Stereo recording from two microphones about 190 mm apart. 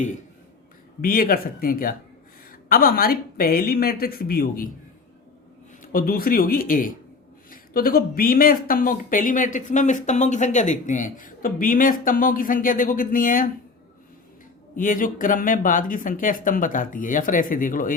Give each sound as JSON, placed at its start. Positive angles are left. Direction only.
{"t": 1.0, "sound": "speech", "side_deg": 50}
{"t": 5.8, "sound": "speech", "side_deg": 50}
{"t": 14.8, "sound": "speech", "side_deg": 45}